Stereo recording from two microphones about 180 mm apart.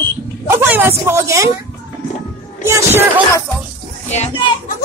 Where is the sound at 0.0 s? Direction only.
15° right (ahead or behind).